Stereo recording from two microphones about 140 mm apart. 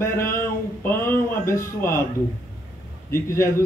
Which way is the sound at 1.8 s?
15° left (ahead or behind).